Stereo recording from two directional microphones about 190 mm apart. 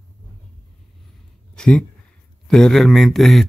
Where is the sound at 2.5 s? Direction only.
Centre (ahead or behind).